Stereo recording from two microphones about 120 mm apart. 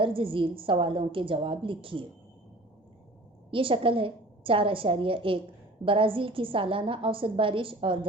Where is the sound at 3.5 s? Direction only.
45° right (ahead or behind).